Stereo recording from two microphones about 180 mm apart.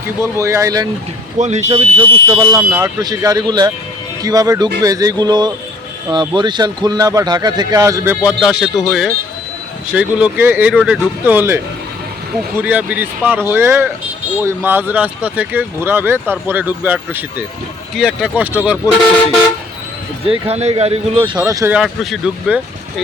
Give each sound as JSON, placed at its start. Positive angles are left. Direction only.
{"t": 0.2, "sound": "speech", "side_deg": -15}
{"t": 1.4, "sound": "speech", "side_deg": -40}
{"t": 2.2, "sound": "speech", "side_deg": -20}
{"t": 8.2, "sound": "speech", "side_deg": -5}
{"t": 20.2, "sound": "speech", "side_deg": -35}
{"t": 21.8, "sound": "speech", "side_deg": -5}